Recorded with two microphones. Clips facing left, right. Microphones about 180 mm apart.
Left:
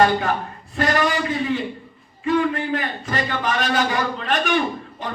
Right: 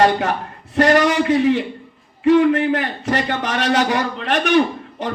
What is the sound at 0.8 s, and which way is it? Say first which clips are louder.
A man's voice: right 6 dB; 75° right (ahead or behind).